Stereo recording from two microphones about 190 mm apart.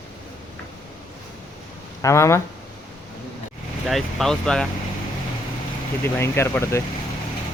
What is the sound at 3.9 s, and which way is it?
Speech, centre (ahead or behind).